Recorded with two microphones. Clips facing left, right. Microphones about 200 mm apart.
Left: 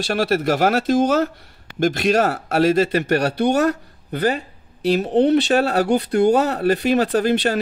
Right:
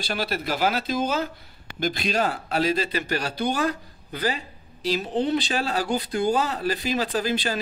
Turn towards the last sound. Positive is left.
turn(degrees=65)  # may be behind; listen again after turning